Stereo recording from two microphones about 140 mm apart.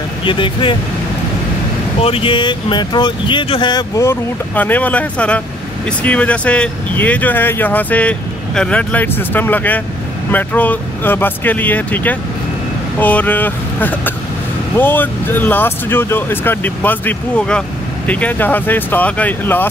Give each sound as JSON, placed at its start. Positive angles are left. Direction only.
{"t": 0.2, "sound": "speech", "side_deg": 35}
{"t": 2.0, "sound": "speech", "side_deg": 40}